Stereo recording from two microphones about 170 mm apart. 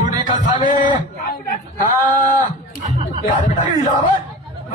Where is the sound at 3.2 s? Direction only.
50° left (ahead or behind).